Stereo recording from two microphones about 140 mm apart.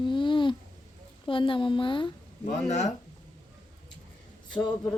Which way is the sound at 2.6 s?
55° left (ahead or behind).